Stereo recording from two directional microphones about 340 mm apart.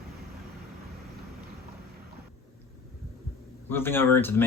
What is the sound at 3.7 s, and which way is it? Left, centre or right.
Speech, centre.